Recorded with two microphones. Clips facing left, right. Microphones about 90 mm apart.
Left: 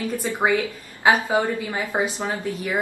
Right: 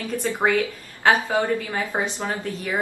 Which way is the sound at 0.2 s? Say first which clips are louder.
Right 1 dB; 15° left (ahead or behind).